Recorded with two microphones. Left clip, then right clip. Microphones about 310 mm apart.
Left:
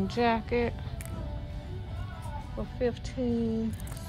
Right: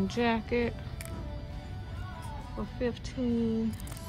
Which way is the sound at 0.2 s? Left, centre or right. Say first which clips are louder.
Left 2 dB; centre.